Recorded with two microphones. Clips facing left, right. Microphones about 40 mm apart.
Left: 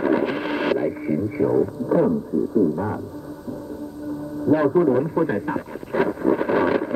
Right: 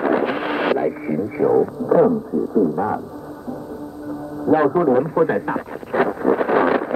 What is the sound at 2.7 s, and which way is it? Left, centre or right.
Music, centre.